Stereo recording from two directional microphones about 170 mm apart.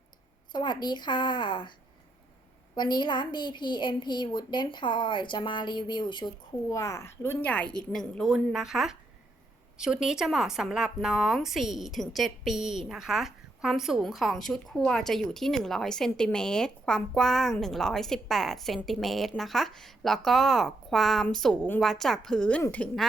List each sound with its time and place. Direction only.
0.5 s a woman's voice: 25° left (ahead or behind)
2.7 s a woman's voice: 25° left (ahead or behind); by 23.0 s 10° left (ahead or behind)